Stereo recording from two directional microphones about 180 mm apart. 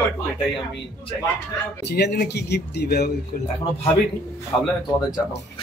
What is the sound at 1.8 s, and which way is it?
A man's voice, 65° left (ahead or behind).